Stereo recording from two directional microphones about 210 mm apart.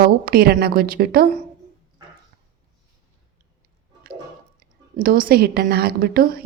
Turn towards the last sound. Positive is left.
turn(degrees=-45)  # may be behind; listen again after turning